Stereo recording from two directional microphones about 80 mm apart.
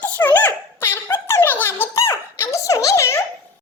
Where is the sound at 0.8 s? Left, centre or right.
Left.